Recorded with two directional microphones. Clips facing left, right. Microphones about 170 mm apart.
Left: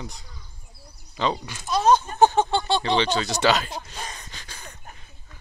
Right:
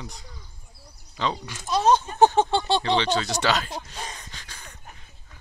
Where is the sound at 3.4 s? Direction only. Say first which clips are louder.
Left 7 dB; 20° left (ahead or behind).